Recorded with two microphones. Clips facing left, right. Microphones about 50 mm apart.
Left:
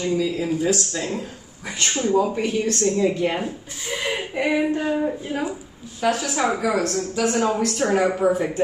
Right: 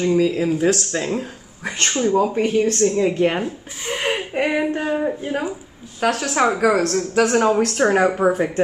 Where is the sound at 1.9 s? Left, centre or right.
Right.